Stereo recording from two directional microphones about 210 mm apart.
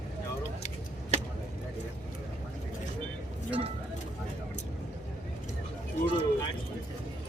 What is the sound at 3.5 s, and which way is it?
Speech, 25° right (ahead or behind).